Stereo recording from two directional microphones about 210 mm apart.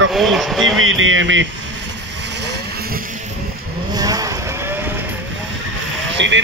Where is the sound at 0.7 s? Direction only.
70° right (ahead or behind).